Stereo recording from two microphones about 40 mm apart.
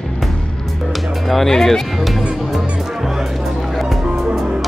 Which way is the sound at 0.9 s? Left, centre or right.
Centre.